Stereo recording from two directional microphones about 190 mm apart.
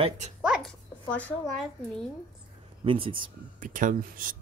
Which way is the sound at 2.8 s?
30° right (ahead or behind).